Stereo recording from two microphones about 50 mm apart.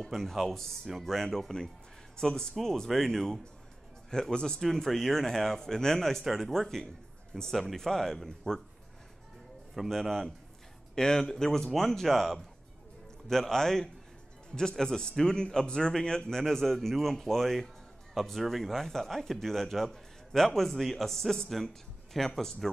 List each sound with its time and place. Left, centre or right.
0.1 s speech: centre
9.8 s speech: centre